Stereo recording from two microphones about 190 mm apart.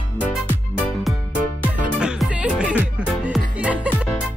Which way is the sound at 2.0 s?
5° right (ahead or behind).